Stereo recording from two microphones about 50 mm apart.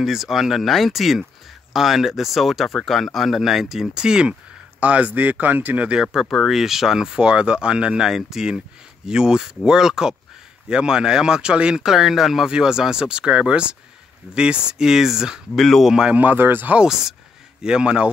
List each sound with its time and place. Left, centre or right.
0.0 s speech: centre
4.7 s speech: right
6.2 s speech: centre
6.5 s speech: centre
15.5 s speech: centre
16.1 s speech: right
16.3 s speech: right
16.7 s speech: centre